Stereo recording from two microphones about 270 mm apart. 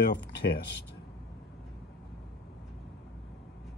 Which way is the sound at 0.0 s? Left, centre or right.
Left.